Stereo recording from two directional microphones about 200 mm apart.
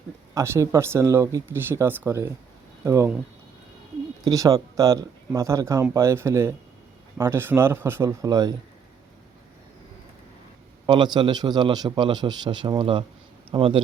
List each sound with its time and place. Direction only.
0.3 s speech: 15° right (ahead or behind)
4.2 s speech: 15° right (ahead or behind)
10.8 s a man's voice: 20° right (ahead or behind)